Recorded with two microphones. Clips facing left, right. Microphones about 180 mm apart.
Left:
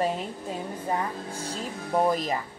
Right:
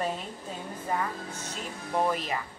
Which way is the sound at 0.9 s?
35° left (ahead or behind).